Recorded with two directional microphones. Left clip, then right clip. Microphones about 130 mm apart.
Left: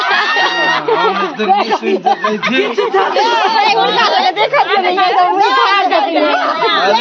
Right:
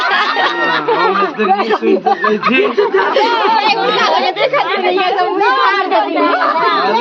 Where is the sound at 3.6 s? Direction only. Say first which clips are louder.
Left 1 dB; 35° left (ahead or behind).